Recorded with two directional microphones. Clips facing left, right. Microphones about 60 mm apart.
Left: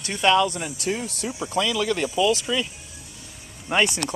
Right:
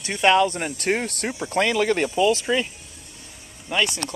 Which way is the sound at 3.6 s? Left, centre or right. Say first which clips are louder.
Left 2 dB; left.